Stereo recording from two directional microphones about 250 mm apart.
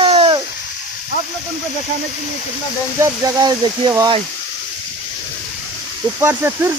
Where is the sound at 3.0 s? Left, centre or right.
Centre.